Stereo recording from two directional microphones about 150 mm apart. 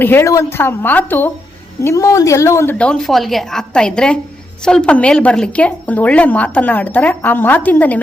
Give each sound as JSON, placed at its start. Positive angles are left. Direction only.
{"t": 0.0, "sound": "a woman's voice", "side_deg": 15}
{"t": 2.7, "sound": "a woman's voice", "side_deg": 5}